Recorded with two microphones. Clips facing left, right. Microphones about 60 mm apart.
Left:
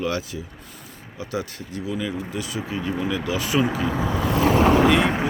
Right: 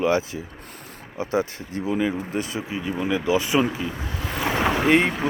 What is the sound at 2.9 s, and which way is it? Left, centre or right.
Speech, centre.